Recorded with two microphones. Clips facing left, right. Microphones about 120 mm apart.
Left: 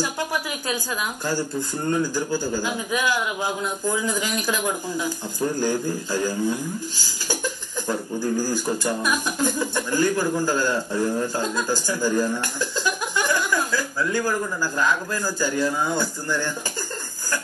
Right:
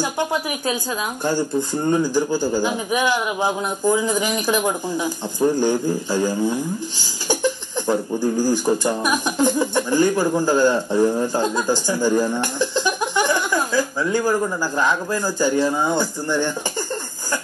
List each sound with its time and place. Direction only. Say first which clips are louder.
0.0 s a man's voice: right 4 dB; 20° right (ahead or behind)